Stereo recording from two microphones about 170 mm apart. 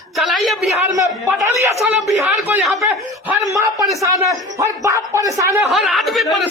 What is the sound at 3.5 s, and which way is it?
A man's voice, 20° right (ahead or behind).